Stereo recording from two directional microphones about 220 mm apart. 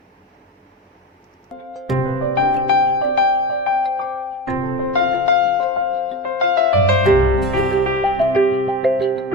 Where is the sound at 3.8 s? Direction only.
Centre (ahead or behind).